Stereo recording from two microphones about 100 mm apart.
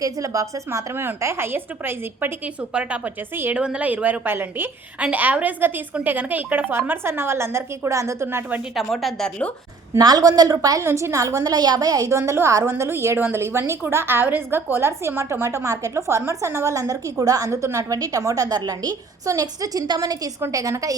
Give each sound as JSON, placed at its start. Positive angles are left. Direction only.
{"t": 0.0, "sound": "a woman's voice", "side_deg": -35}
{"t": 8.7, "sound": "a woman's voice", "side_deg": 0}
{"t": 10.0, "sound": "a woman's voice", "side_deg": -40}